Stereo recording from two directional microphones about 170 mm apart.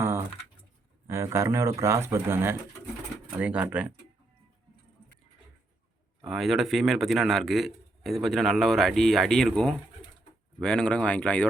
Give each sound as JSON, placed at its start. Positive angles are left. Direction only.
{"t": 1.0, "sound": "speech", "side_deg": -15}
{"t": 6.2, "sound": "a man's voice", "side_deg": 0}